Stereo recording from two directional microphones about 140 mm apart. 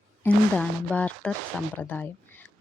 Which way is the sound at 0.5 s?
5° left (ahead or behind).